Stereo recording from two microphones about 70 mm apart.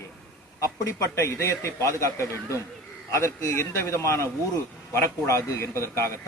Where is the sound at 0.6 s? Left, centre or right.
Left.